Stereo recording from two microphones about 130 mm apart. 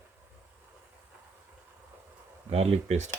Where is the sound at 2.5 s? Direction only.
55° right (ahead or behind).